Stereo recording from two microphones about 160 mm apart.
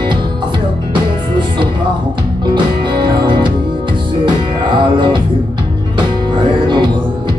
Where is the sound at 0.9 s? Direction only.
30° right (ahead or behind).